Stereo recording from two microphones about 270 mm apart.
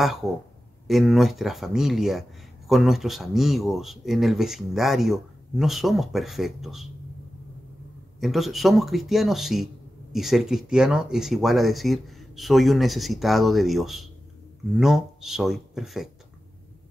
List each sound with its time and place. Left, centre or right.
0.0 s speech: centre
8.2 s speech: centre